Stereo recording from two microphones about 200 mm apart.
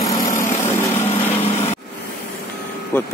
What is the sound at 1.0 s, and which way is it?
Light engine, 10° left (ahead or behind).